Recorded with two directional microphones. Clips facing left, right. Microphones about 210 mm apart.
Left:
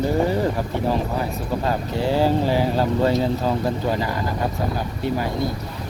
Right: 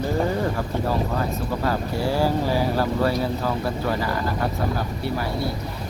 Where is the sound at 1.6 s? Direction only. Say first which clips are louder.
Left 1 dB; 20° left (ahead or behind).